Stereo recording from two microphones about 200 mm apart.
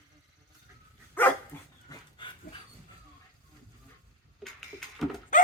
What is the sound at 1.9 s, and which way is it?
Dog, 20° left (ahead or behind).